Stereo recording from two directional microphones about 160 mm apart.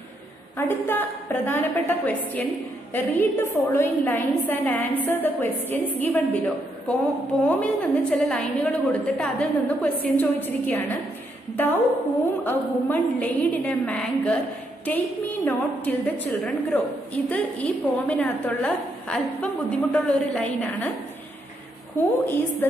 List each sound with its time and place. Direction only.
0.6 s a woman's voice: 15° left (ahead or behind)
12.4 s a woman's voice: 10° left (ahead or behind)
21.9 s a woman's voice: 10° left (ahead or behind)